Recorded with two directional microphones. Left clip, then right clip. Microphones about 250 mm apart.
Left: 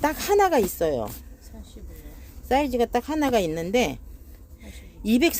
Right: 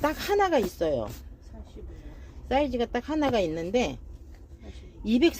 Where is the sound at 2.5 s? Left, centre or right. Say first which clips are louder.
Left 4 dB; left.